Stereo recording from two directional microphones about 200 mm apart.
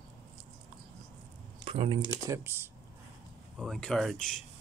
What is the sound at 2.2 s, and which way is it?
Speech, 15° right (ahead or behind).